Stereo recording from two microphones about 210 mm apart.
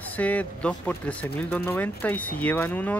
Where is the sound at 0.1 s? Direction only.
5° left (ahead or behind).